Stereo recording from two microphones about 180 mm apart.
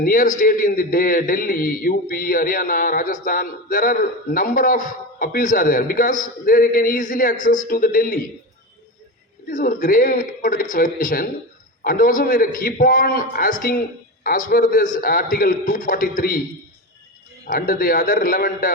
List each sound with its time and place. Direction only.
0.0 s a man's voice: 50° left (ahead or behind)
9.5 s a man's voice: 45° left (ahead or behind)
17.4 s a man's voice: 50° left (ahead or behind)